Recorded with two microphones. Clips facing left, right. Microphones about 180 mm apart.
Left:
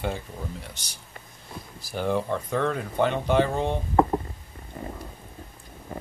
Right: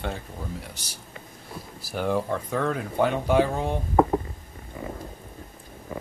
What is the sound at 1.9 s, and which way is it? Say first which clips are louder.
Speech: even; centre (ahead or behind).